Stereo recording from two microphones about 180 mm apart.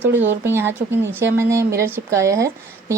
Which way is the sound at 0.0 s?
10° right (ahead or behind).